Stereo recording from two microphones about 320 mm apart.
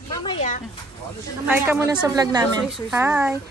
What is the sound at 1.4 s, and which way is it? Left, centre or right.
A woman's voice, centre.